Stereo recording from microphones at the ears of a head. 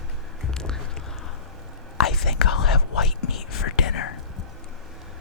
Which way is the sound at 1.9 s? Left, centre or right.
Left.